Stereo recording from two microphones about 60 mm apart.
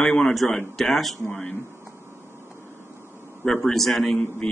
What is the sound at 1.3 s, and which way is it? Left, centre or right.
Speech, left.